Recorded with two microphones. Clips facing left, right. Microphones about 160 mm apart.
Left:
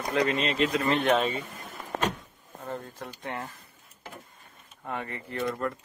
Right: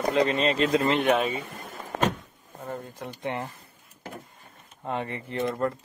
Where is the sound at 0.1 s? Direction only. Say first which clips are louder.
Right 2 dB; 25° right (ahead or behind).